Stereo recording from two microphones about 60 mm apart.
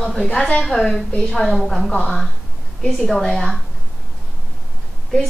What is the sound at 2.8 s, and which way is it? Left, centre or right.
Speech, centre.